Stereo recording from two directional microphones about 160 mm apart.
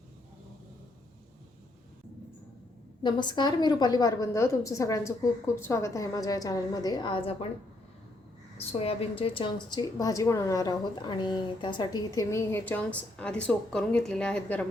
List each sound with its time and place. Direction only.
3.0 s a woman's voice: 30° left (ahead or behind)
8.5 s a woman's voice: 35° left (ahead or behind); by 14.7 s 5° left (ahead or behind)